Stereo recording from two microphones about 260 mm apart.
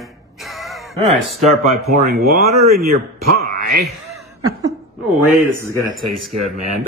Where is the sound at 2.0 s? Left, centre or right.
Right.